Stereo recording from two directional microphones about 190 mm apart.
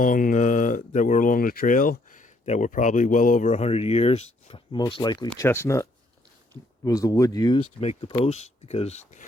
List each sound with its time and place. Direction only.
0.0 s speech: 45° left (ahead or behind)